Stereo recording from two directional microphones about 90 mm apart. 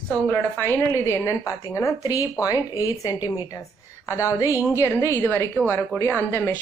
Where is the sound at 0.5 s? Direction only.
25° left (ahead or behind).